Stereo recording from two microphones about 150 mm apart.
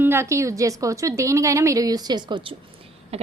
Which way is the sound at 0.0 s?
15° right (ahead or behind).